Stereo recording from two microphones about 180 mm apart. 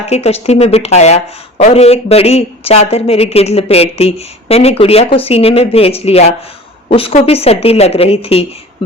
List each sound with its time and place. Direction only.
0.1 s a woman's voice: 35° left (ahead or behind)